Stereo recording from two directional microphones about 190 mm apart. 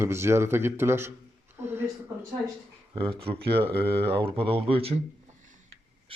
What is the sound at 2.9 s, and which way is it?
Speech, 30° right (ahead or behind).